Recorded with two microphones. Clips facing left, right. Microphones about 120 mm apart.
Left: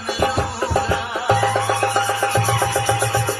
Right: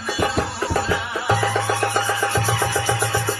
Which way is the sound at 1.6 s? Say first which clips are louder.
Left 2 dB; 20° left (ahead or behind).